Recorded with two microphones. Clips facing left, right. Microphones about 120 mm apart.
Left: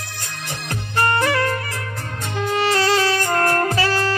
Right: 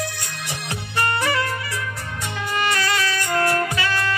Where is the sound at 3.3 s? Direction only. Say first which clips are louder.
Left 2 dB; 45° left (ahead or behind).